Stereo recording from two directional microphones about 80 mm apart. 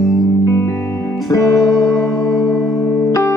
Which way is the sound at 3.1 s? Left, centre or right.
Left.